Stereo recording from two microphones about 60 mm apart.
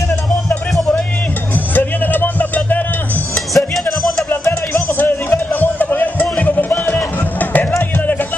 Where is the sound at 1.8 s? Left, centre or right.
Left.